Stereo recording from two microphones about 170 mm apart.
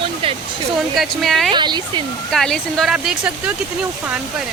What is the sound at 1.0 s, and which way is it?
Speech, centre (ahead or behind).